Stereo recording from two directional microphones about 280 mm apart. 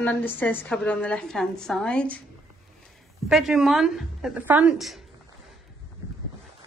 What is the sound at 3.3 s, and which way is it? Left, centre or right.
A woman's voice, centre.